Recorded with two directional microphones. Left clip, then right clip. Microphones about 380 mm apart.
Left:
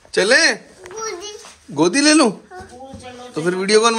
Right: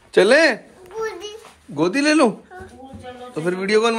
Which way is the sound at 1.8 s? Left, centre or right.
Centre.